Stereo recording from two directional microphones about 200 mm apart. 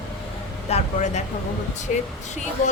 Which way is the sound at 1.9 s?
35° left (ahead or behind).